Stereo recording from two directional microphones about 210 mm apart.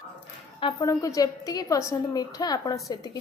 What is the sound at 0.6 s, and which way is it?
A woman's voice, 15° left (ahead or behind).